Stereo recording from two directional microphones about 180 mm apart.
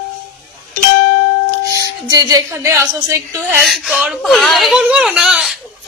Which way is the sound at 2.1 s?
20° right (ahead or behind).